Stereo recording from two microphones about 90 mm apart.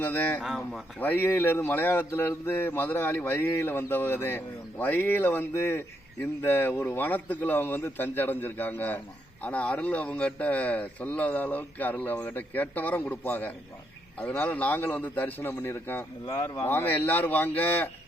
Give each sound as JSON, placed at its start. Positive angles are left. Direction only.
{"t": 0.0, "sound": "speech", "side_deg": 20}
{"t": 0.4, "sound": "speech", "side_deg": 0}
{"t": 0.9, "sound": "speech", "side_deg": 20}
{"t": 16.3, "sound": "speech", "side_deg": 40}
{"t": 16.6, "sound": "speech", "side_deg": 20}